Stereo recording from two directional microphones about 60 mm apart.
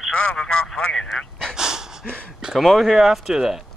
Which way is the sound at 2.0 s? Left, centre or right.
Centre.